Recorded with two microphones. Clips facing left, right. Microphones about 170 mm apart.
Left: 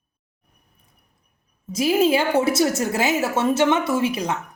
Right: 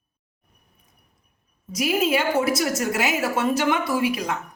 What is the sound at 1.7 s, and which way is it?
A woman's voice, 30° left (ahead or behind).